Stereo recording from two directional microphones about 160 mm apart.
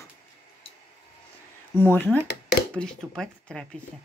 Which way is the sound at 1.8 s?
10° left (ahead or behind).